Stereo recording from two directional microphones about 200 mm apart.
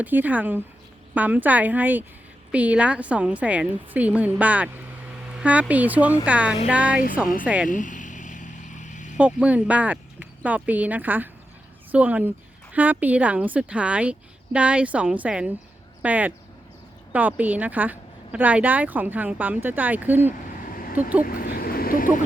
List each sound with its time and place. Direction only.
0.0 s a woman's voice: 10° right (ahead or behind)
7.7 s vehicle: 40° left (ahead or behind)
9.1 s a woman's voice: 5° right (ahead or behind)
21.2 s speech: 45° left (ahead or behind)